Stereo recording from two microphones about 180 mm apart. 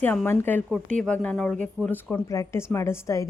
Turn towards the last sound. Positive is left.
turn(degrees=15)  # may be behind; listen again after turning